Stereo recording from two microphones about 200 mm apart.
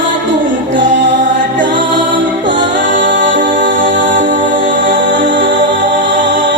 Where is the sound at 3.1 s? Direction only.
65° right (ahead or behind).